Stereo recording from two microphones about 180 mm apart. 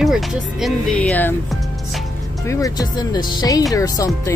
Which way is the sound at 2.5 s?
20° left (ahead or behind).